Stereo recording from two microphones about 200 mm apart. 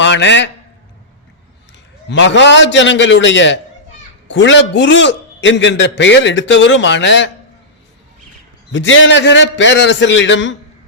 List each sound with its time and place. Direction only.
0.0 s a man's voice: 65° left (ahead or behind)
2.0 s a man's voice: 65° left (ahead or behind)
8.7 s a man's voice: 70° left (ahead or behind)